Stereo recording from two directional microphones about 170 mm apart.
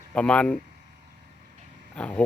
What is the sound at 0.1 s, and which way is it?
Speech, 5° left (ahead or behind).